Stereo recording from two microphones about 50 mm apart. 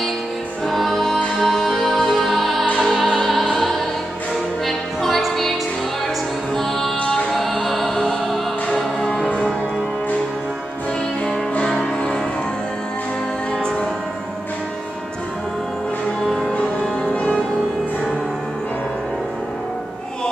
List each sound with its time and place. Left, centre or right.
0.7 s music: centre
7.6 s music: centre
17.1 s music: centre